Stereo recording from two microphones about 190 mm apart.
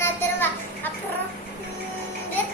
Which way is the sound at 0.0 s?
10° left (ahead or behind).